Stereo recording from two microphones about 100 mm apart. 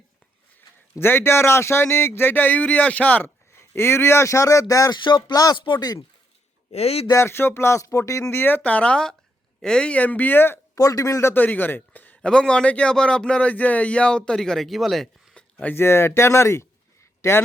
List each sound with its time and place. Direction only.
0.9 s speech: 25° left (ahead or behind)
3.5 s speech: 25° left (ahead or behind)
4.9 s speech: 50° left (ahead or behind)
6.7 s a man's voice: 90° left
7.1 s speech: 25° left (ahead or behind)
8.3 s a man's voice: 20° left (ahead or behind)
10.8 s a man's voice: 35° left (ahead or behind); by 15.4 s 5° left (ahead or behind)
15.5 s speech: 25° left (ahead or behind)